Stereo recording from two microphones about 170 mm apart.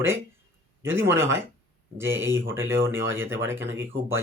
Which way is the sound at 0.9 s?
15° right (ahead or behind).